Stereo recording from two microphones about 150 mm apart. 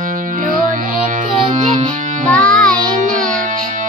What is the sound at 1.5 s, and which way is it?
Music, 55° right (ahead or behind).